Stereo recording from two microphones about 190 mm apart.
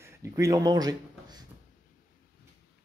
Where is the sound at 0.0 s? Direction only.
15° right (ahead or behind).